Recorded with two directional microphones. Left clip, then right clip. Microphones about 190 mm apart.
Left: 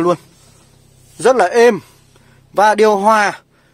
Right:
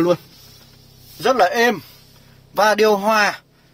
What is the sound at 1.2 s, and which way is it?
A man's voice, 50° left (ahead or behind).